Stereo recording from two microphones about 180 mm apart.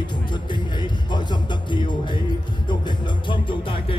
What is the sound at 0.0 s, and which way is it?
Music, 25° left (ahead or behind).